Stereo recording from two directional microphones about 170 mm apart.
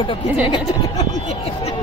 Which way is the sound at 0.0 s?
30° left (ahead or behind).